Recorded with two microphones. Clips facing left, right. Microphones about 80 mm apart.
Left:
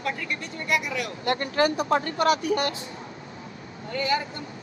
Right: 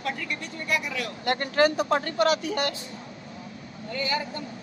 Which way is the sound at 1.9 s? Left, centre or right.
Left.